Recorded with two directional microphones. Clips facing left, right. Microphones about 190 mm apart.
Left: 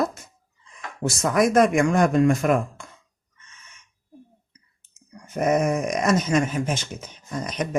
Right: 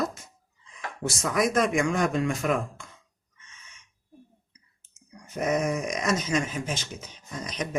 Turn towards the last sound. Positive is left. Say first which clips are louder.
# left 5 dB
turn(degrees=55)  # may be behind; listen again after turning